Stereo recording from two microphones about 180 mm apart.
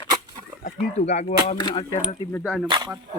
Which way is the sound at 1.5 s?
25° left (ahead or behind).